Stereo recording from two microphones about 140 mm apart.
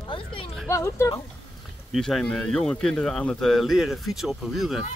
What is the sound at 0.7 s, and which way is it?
Speech, 20° left (ahead or behind).